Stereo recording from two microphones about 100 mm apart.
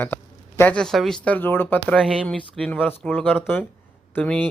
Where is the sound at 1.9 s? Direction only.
10° right (ahead or behind).